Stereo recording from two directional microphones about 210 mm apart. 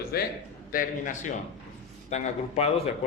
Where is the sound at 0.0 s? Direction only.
50° left (ahead or behind).